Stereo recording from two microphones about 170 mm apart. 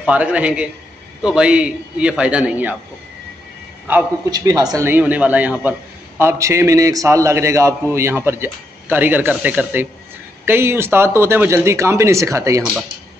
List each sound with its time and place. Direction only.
0.0 s a man's voice: 10° right (ahead or behind)
4.3 s a man's voice: 25° right (ahead or behind)